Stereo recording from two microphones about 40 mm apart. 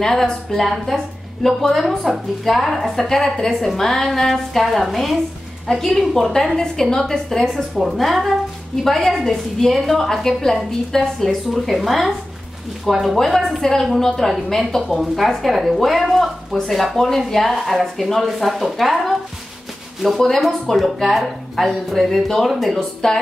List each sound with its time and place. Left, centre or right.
0.0 s a woman's voice: centre
7.8 s a woman's voice: centre
20.2 s a woman's voice: centre
23.0 s a woman's voice: centre